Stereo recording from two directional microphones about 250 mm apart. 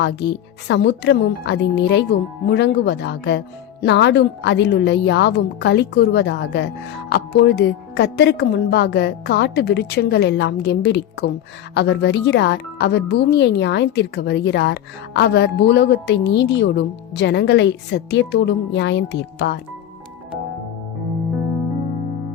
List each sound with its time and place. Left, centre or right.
0.7 s speech: left